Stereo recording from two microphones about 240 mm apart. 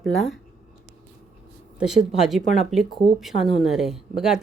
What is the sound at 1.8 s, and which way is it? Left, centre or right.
Speech, centre.